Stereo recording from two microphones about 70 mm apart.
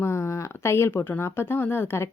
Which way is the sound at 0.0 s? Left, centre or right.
Left.